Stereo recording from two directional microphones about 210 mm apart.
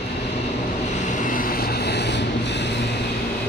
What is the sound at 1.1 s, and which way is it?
Vehicle, 40° left (ahead or behind).